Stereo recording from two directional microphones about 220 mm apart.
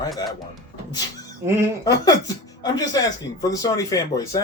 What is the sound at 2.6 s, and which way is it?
Speech, 15° left (ahead or behind).